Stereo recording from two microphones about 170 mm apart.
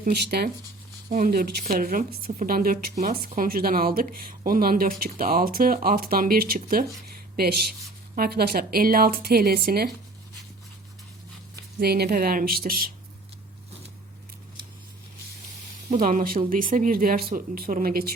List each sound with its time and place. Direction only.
0.0 s speech: 65° right (ahead or behind)
11.8 s speech: 70° right (ahead or behind)
15.9 s speech: 55° right (ahead or behind)